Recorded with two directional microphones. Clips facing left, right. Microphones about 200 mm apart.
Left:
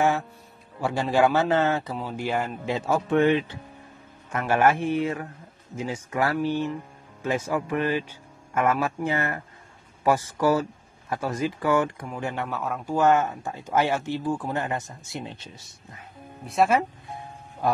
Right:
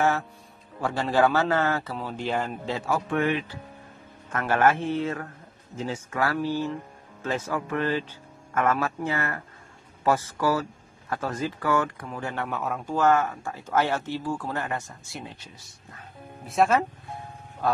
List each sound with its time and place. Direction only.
0.7 s speech: 10° left (ahead or behind)
2.9 s speech: 25° left (ahead or behind)
4.3 s speech: 15° left (ahead or behind)
12.4 s speech: centre (ahead or behind)
12.9 s speech: 20° left (ahead or behind)
16.4 s speech: centre (ahead or behind)